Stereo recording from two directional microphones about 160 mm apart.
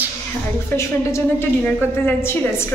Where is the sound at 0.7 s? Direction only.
15° left (ahead or behind).